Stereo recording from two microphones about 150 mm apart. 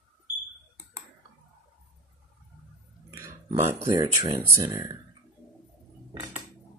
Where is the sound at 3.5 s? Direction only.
45° right (ahead or behind).